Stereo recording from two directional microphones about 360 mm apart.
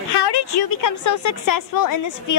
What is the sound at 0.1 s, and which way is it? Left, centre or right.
A woman's voice, left.